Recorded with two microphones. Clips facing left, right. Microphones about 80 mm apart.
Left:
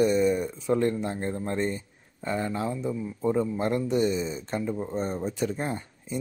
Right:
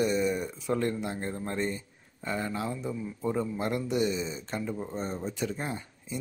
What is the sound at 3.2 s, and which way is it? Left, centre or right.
Speech, centre.